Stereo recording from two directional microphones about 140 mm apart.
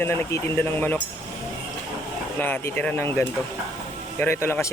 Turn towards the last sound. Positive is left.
turn(degrees=20)  # may be behind; listen again after turning